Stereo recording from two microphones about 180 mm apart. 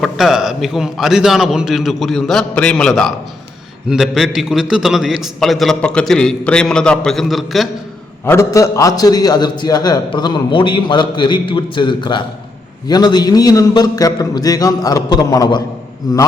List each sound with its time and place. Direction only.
0.0 s a man's voice: centre (ahead or behind)
8.2 s a man's voice: 15° left (ahead or behind)